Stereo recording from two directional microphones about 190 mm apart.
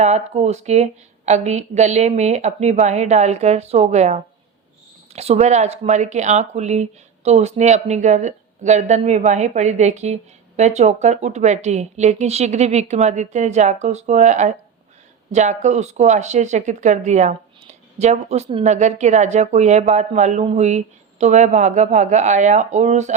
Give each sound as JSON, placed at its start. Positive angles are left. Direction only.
{"t": 0.0, "sound": "speech", "side_deg": -35}